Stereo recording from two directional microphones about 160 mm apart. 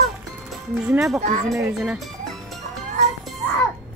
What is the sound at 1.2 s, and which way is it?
Speech, 50° right (ahead or behind).